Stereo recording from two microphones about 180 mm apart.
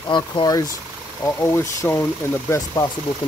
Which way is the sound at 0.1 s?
25° left (ahead or behind).